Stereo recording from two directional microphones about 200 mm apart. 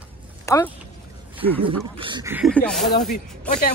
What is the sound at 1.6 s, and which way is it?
Speech, 25° right (ahead or behind).